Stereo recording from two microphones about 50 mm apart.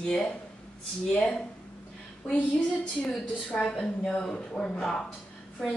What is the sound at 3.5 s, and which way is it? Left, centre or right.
Speech, centre.